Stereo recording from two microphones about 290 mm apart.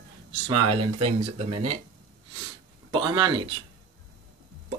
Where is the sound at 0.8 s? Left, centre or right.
Right.